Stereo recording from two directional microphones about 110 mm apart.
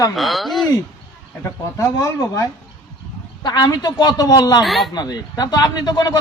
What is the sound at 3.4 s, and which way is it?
A man's voice, 40° left (ahead or behind).